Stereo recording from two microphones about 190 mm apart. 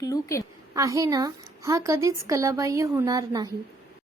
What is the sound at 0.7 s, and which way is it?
A woman's voice, 20° right (ahead or behind).